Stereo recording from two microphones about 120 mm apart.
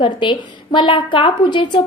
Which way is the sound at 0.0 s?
45° left (ahead or behind).